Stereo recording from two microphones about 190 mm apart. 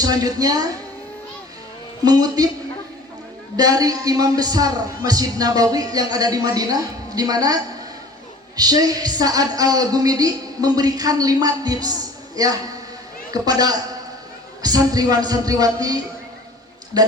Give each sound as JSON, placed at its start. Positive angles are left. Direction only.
{"t": 0.0, "sound": "speech", "side_deg": -20}
{"t": 2.0, "sound": "speech", "side_deg": -20}
{"t": 3.6, "sound": "speech", "side_deg": -20}